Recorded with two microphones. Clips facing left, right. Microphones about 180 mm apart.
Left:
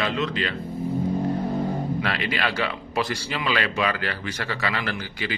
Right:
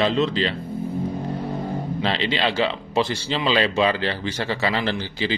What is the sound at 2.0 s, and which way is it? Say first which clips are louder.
Speech: right 4 dB; 25° right (ahead or behind).